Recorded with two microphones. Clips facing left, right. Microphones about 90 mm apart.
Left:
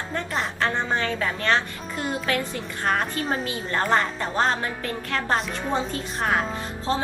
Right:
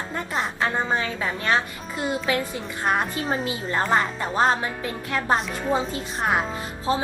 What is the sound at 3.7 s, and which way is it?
Speech, 10° right (ahead or behind).